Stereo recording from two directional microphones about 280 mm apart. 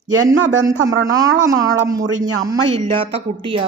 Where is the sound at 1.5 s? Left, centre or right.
Centre.